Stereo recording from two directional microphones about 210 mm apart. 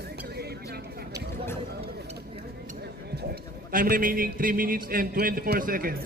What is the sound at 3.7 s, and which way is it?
Speech, 40° right (ahead or behind).